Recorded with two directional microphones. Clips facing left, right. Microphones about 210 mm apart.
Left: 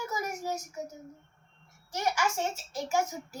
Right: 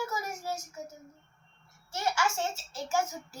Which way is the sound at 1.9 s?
15° left (ahead or behind).